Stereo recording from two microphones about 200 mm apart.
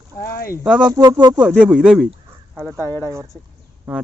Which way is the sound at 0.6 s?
5° right (ahead or behind).